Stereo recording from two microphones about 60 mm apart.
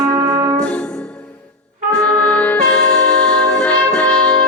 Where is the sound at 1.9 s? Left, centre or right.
Centre.